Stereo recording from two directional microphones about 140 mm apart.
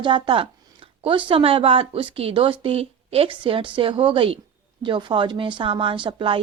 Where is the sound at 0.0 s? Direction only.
35° right (ahead or behind).